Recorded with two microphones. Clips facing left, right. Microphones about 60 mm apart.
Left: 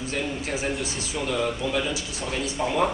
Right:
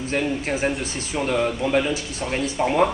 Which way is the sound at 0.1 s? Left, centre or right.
Right.